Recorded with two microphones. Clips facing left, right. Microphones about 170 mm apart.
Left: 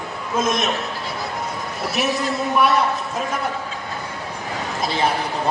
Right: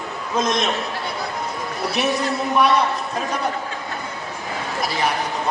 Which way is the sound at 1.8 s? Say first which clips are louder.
Right 1 dB; centre (ahead or behind).